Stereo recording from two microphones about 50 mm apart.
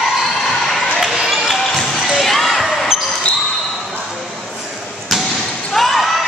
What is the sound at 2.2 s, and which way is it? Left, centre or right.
Basketball bounce, centre.